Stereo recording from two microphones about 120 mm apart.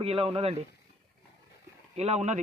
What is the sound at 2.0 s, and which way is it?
Speech, 65° right (ahead or behind).